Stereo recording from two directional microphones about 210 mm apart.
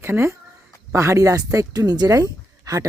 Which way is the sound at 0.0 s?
10° right (ahead or behind).